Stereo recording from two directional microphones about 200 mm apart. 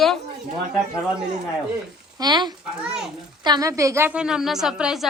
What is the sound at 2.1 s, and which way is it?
Speech, 20° right (ahead or behind).